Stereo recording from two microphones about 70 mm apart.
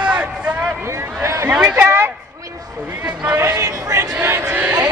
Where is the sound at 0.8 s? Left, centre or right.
Right.